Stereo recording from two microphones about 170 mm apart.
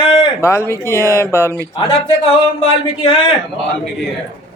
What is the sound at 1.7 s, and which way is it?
Speech, 30° left (ahead or behind).